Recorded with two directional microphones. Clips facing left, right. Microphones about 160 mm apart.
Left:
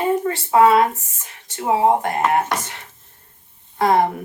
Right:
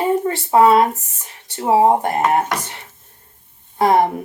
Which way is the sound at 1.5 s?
30° right (ahead or behind).